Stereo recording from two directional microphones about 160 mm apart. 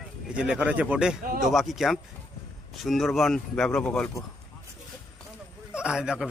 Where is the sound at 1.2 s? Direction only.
60° right (ahead or behind).